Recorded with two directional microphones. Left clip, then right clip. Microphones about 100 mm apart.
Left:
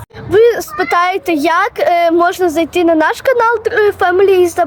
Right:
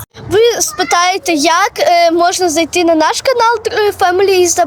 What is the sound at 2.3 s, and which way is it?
Speech, 55° left (ahead or behind).